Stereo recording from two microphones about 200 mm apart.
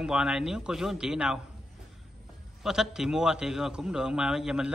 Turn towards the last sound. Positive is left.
turn(degrees=-5)  # may be behind; listen again after turning